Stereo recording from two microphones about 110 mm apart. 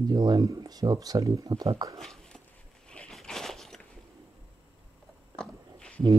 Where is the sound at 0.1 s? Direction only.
40° right (ahead or behind).